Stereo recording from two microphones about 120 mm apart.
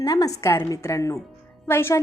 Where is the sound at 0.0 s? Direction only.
30° left (ahead or behind).